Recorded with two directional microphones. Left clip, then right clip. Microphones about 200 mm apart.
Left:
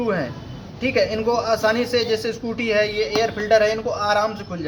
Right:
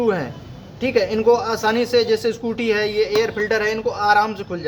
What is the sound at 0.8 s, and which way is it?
A man's voice, 45° right (ahead or behind).